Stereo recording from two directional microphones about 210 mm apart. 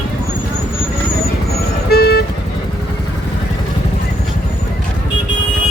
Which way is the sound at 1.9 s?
50° left (ahead or behind).